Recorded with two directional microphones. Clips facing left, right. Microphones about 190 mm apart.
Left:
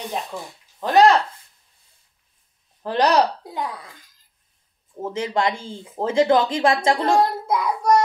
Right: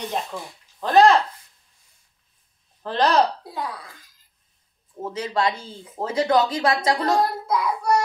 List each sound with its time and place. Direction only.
0.7 s speech: 15° left (ahead or behind)
2.8 s a woman's voice: 15° left (ahead or behind)
5.1 s a woman's voice: 25° left (ahead or behind)